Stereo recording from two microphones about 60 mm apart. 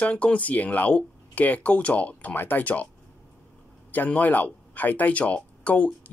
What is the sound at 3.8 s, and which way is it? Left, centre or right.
Speech, left.